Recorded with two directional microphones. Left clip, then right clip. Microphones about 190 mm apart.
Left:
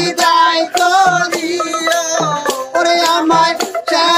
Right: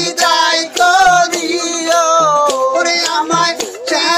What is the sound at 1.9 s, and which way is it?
Music, 25° right (ahead or behind).